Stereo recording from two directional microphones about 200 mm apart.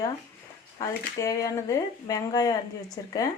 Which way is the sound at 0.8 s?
15° left (ahead or behind).